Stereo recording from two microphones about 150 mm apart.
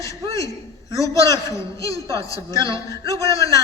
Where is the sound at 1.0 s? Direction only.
20° left (ahead or behind).